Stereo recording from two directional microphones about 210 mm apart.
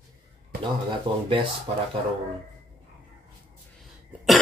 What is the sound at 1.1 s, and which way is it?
Speech, 20° right (ahead or behind).